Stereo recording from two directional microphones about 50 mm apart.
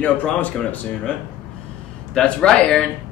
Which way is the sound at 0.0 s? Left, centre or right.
Left.